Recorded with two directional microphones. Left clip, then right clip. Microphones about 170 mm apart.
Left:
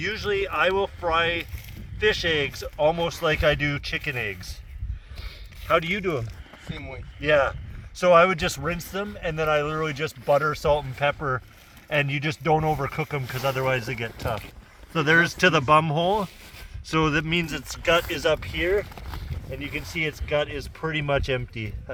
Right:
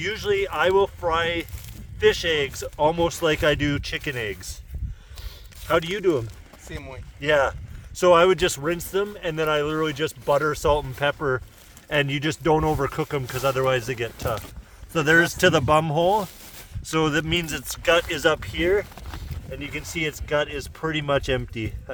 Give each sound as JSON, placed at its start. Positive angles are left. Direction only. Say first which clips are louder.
{"t": 0.0, "sound": "speech", "louder": "right 2 dB", "side_deg": -50}
{"t": 5.6, "sound": "speech", "louder": "right 1 dB", "side_deg": -45}
{"t": 14.9, "sound": "speech", "louder": "right 1 dB", "side_deg": -90}
{"t": 18.1, "sound": "speech", "louder": "right 2 dB", "side_deg": -50}